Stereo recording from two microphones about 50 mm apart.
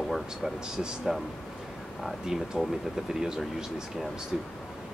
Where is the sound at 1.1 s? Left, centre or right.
Centre.